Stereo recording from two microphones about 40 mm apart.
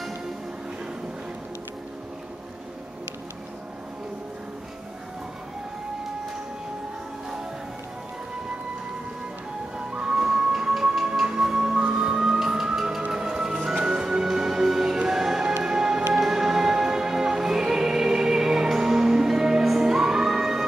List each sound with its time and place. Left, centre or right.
9.8 s music: right